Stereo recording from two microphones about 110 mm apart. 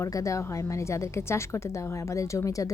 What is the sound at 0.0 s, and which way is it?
A woman's voice, 30° left (ahead or behind).